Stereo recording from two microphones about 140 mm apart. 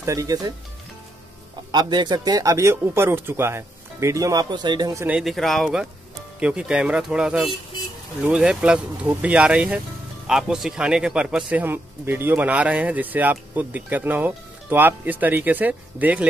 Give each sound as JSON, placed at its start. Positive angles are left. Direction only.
{"t": 0.0, "sound": "speech", "side_deg": -25}
{"t": 1.7, "sound": "speech", "side_deg": -30}
{"t": 5.0, "sound": "speech", "side_deg": -5}